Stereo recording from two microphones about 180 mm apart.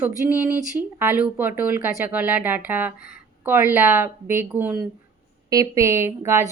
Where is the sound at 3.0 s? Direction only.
55° left (ahead or behind).